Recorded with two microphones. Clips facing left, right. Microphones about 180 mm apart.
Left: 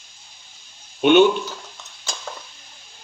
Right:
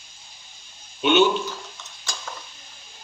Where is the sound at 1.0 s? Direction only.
55° left (ahead or behind).